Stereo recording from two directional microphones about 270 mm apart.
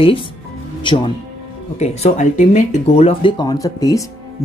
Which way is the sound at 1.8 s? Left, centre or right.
Left.